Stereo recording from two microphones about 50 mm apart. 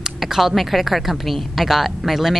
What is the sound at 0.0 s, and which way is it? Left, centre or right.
A woman's voice, centre.